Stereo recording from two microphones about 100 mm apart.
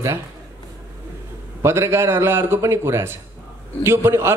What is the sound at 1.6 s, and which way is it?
A man's voice, 25° right (ahead or behind).